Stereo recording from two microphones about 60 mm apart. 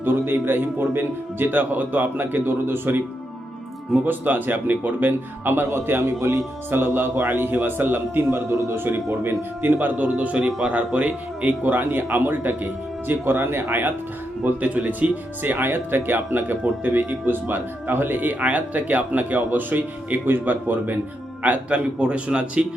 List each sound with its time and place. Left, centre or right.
0.0 s speech: right
14.6 s a man's voice: right